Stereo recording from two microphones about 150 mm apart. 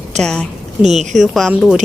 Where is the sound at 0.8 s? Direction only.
50° right (ahead or behind).